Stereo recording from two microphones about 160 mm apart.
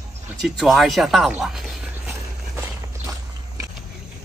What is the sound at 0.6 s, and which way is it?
Speech, centre (ahead or behind).